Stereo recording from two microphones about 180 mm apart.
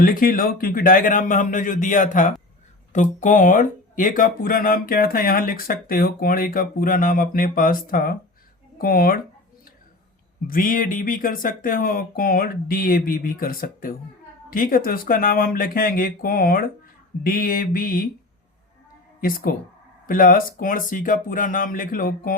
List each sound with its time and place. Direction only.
0.0 s speech: 50° left (ahead or behind)
10.4 s speech: 50° left (ahead or behind)
19.2 s speech: 55° left (ahead or behind)